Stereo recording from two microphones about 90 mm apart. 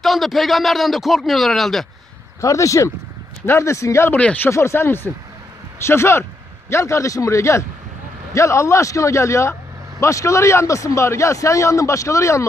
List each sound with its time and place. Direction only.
0.0 s a man's voice: centre (ahead or behind)
2.4 s speech: 35° left (ahead or behind)
4.2 s speech: 15° left (ahead or behind)
4.5 s speech: 30° left (ahead or behind)